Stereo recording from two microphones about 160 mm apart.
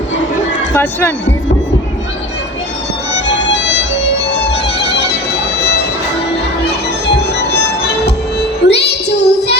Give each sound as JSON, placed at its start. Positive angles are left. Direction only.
{"t": 0.7, "sound": "speech", "side_deg": 10}
{"t": 3.2, "sound": "music", "side_deg": 90}
{"t": 8.0, "sound": "music", "side_deg": 90}